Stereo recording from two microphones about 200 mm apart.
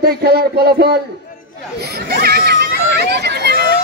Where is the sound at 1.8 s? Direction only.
50° right (ahead or behind).